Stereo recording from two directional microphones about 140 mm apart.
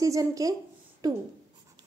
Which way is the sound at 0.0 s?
25° right (ahead or behind).